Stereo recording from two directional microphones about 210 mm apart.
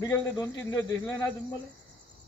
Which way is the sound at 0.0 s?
15° left (ahead or behind).